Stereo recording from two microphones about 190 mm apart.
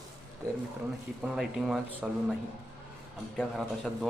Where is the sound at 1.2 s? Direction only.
5° right (ahead or behind).